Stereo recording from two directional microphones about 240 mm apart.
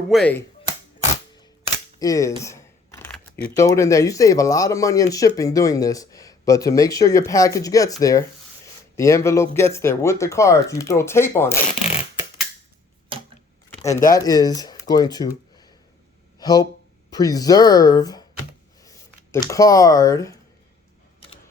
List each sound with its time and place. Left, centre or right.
0.1 s speech: centre
2.0 s speech: centre
14.1 s speech: centre
18.8 s a sound: centre